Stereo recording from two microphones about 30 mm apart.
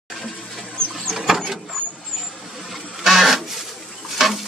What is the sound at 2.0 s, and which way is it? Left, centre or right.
Vehicle, centre.